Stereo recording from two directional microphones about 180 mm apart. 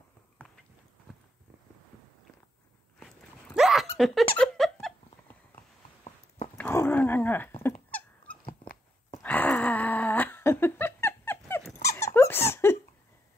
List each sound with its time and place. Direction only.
1.1 s clip-clop: centre (ahead or behind)
3.5 s a sound: centre (ahead or behind)
6.0 s a sound: 40° left (ahead or behind)
6.5 s dog: 10° left (ahead or behind)
7.9 s squeak: 10° left (ahead or behind)
11.8 s dog: 15° left (ahead or behind)